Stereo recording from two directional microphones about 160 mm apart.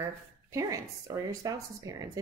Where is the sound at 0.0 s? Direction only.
20° right (ahead or behind).